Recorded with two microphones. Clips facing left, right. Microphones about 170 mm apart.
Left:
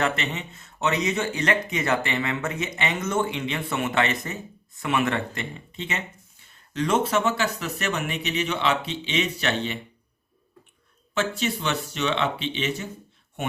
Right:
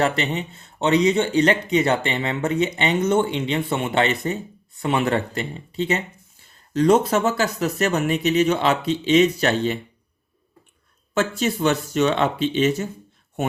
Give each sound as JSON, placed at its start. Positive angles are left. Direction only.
{"t": 0.0, "sound": "speech", "side_deg": -35}
{"t": 11.1, "sound": "speech", "side_deg": -45}